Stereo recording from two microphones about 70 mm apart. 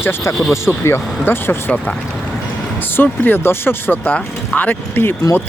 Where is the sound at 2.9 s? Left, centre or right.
Left.